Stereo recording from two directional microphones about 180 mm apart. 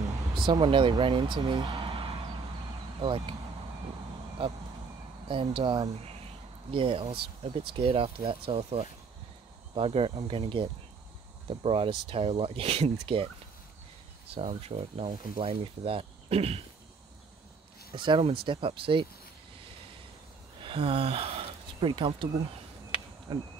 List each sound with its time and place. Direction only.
0.4 s speech: 25° right (ahead or behind)
4.4 s speech: 30° right (ahead or behind)
14.3 s speech: 35° right (ahead or behind)
17.9 s speech: 25° right (ahead or behind)
20.6 s speech: 30° right (ahead or behind)
22.9 s a sound: 30° left (ahead or behind)
23.3 s speech: 25° right (ahead or behind)